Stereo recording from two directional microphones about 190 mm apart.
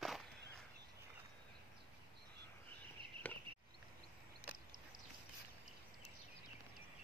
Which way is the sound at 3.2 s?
10° left (ahead or behind).